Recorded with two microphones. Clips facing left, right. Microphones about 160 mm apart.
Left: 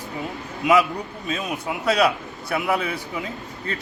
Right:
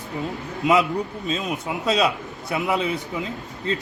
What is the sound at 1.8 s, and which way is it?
A man's voice, 20° right (ahead or behind).